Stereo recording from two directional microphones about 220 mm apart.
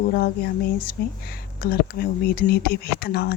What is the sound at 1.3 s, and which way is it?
A woman's voice, 45° left (ahead or behind).